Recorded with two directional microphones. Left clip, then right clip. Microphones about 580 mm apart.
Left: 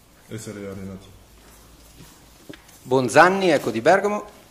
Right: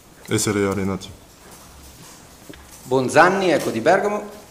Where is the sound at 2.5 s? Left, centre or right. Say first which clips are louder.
Even; centre.